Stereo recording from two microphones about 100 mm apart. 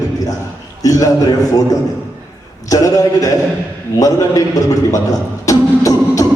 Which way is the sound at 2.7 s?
35° left (ahead or behind).